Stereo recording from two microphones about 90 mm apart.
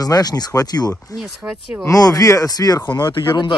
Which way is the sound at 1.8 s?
40° left (ahead or behind).